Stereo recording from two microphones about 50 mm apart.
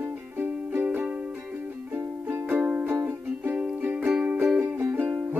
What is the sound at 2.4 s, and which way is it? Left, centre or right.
Music, right.